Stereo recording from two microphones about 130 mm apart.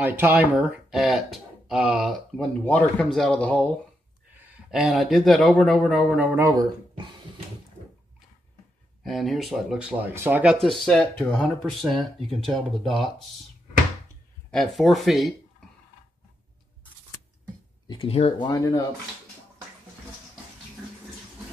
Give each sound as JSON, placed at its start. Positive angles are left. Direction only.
{"t": 0.2, "sound": "speech", "side_deg": -15}
{"t": 2.3, "sound": "speech", "side_deg": 10}
{"t": 4.6, "sound": "speech", "side_deg": -5}
{"t": 6.3, "sound": "speech", "side_deg": -25}
{"t": 9.0, "sound": "speech", "side_deg": 0}
{"t": 10.5, "sound": "speech", "side_deg": 0}
{"t": 14.5, "sound": "speech", "side_deg": 0}
{"t": 17.8, "sound": "speech", "side_deg": 45}
{"t": 18.5, "sound": "speech", "side_deg": 30}